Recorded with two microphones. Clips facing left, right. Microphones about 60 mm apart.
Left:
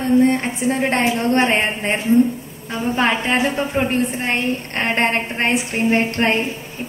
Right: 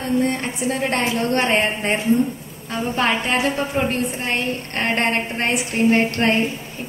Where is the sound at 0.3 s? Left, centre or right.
Left.